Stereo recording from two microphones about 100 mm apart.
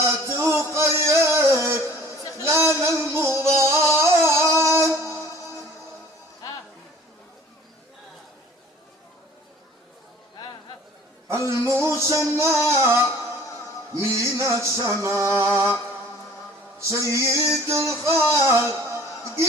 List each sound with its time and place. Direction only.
0.0 s a sound: 25° right (ahead or behind)
0.9 s music: 25° right (ahead or behind)
11.3 s music: 30° right (ahead or behind)
16.9 s music: 30° right (ahead or behind)